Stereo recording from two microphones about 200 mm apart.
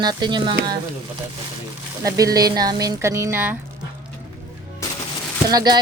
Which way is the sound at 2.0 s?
15° right (ahead or behind).